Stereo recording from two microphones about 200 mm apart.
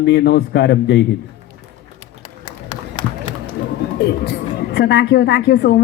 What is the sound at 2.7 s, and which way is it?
Run, 20° left (ahead or behind).